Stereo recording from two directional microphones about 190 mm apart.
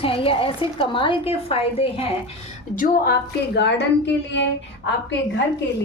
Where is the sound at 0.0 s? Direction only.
30° left (ahead or behind).